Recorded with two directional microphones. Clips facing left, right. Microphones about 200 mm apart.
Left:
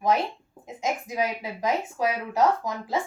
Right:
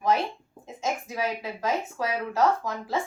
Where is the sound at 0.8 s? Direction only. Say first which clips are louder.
Left 2 dB; 15° left (ahead or behind).